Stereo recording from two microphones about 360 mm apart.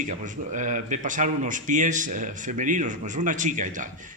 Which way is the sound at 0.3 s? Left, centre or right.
Right.